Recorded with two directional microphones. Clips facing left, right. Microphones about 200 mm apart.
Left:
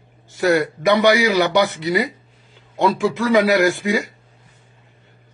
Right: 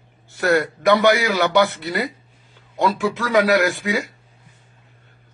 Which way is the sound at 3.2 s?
Centre (ahead or behind).